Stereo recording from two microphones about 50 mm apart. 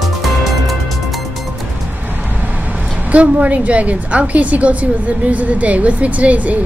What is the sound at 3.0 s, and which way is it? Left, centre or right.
A woman's voice, right.